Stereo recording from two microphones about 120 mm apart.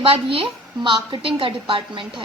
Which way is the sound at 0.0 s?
50° right (ahead or behind).